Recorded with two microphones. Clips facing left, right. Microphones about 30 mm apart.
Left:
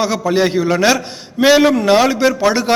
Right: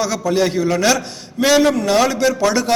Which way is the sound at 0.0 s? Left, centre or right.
Left.